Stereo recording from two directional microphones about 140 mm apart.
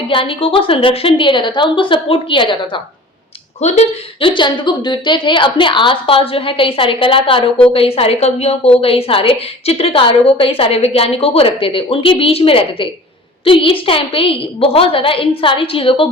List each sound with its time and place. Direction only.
0.1 s a woman's voice: 40° left (ahead or behind)
3.6 s speech: 50° left (ahead or behind)
4.4 s a woman's voice: 35° left (ahead or behind)